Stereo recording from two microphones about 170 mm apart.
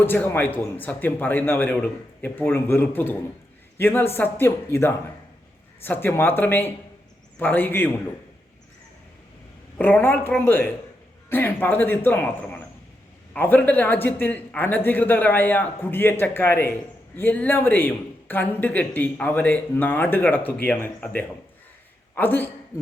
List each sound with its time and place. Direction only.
0.0 s speech: 10° left (ahead or behind)
9.7 s a man's voice: 10° left (ahead or behind)